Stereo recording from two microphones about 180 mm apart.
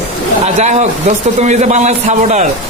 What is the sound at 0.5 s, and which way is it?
A man's voice, 40° right (ahead or behind).